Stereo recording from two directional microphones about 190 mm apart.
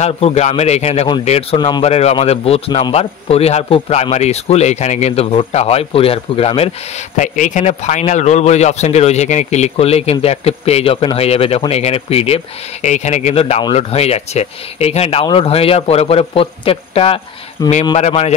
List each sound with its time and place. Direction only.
0.0 s a man's voice: 35° left (ahead or behind)
17.6 s a man's voice: 20° left (ahead or behind)
17.9 s a man's voice: 35° left (ahead or behind)